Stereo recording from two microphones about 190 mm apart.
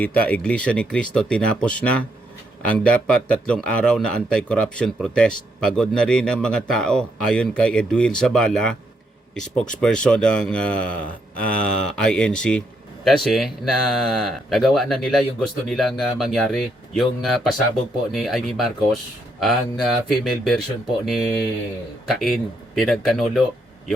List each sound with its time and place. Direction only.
0.0 s a man's voice: 10° left (ahead or behind)